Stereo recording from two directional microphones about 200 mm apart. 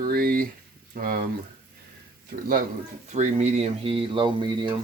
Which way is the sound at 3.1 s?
35° right (ahead or behind).